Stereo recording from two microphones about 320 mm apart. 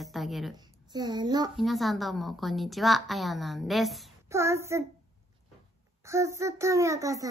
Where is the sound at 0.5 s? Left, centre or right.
Centre.